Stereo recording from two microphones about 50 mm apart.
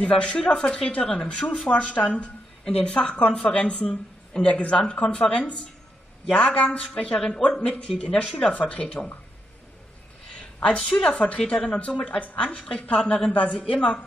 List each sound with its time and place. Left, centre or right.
0.0 s speech: left
7.3 s a woman's voice: centre
7.6 s speech: left
10.3 s a sound: left
10.8 s a woman's voice: centre
11.1 s speech: left